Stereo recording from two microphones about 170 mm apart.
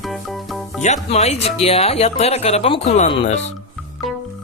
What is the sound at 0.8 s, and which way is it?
Speech, 40° left (ahead or behind).